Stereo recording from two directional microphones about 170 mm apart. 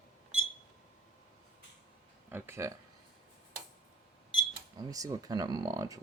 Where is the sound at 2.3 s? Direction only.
15° right (ahead or behind).